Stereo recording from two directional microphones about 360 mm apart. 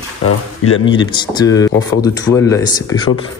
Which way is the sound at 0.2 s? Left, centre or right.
Left.